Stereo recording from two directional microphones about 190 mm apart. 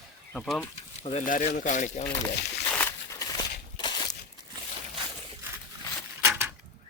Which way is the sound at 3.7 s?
20° left (ahead or behind).